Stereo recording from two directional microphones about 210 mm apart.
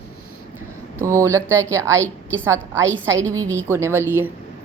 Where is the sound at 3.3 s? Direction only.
15° right (ahead or behind).